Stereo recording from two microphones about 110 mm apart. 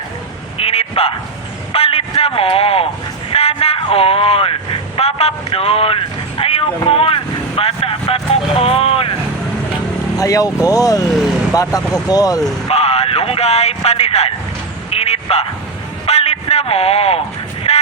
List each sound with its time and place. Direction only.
0.5 s a sound: 65° left (ahead or behind)
3.3 s speech: 65° left (ahead or behind)
10.2 s speech: 30° left (ahead or behind)
12.6 s vehicle: 70° left (ahead or behind)
14.8 s a sound: 70° left (ahead or behind)
17.7 s music: 65° left (ahead or behind)